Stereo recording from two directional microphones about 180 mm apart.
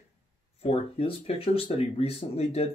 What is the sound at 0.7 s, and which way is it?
Speech, 35° left (ahead or behind).